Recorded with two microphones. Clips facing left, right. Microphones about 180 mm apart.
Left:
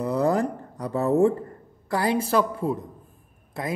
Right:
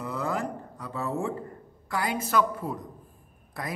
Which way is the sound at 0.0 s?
35° left (ahead or behind).